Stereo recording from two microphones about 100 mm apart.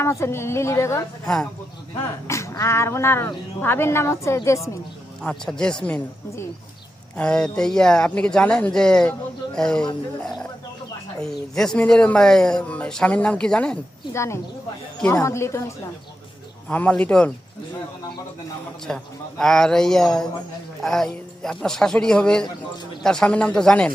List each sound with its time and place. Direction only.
0.0 s speech: 30° left (ahead or behind)
2.2 s a woman's voice: 30° left (ahead or behind)
5.2 s speech: 5° left (ahead or behind)
7.2 s speech: 10° left (ahead or behind)
14.1 s speech: 30° left (ahead or behind)
16.6 s speech: 15° left (ahead or behind)
18.9 s a man's voice: 5° left (ahead or behind)